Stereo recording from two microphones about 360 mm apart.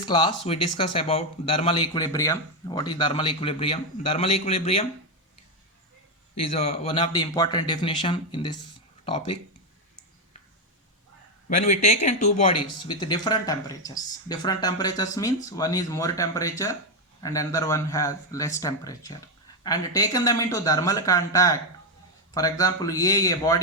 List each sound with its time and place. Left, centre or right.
0.0 s speech: centre
6.9 s speech: centre
11.5 s speech: left
12.8 s speech: centre